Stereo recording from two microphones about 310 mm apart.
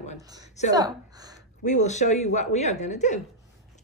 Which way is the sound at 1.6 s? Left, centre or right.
Left.